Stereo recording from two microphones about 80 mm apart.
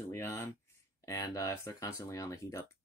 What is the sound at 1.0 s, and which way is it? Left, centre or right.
Speech, left.